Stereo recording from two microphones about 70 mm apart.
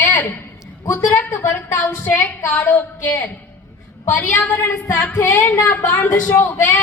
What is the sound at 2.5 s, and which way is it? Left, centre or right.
A woman's voice, left.